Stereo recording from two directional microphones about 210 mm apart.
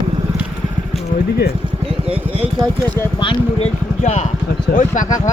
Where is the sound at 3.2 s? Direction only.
25° left (ahead or behind).